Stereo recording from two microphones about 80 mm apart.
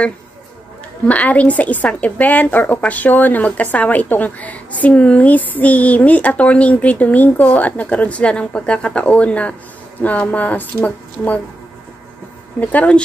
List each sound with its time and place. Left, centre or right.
1.0 s a woman's voice: centre
12.5 s a woman's voice: centre